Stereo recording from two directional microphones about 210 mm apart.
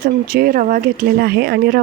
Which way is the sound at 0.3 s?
45° right (ahead or behind).